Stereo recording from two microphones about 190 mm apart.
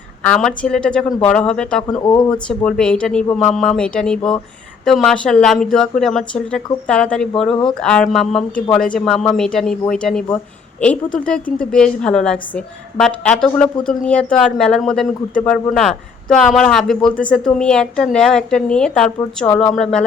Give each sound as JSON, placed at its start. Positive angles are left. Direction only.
{"t": 0.2, "sound": "a woman's voice", "side_deg": 5}
{"t": 2.0, "sound": "speech", "side_deg": 20}
{"t": 2.6, "sound": "a woman's voice", "side_deg": 5}